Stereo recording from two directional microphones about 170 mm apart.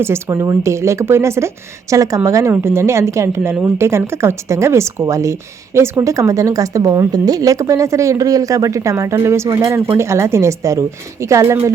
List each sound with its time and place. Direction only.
0.0 s speech: 15° right (ahead or behind)